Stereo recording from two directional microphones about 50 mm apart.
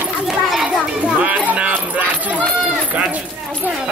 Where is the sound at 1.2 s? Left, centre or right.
Right.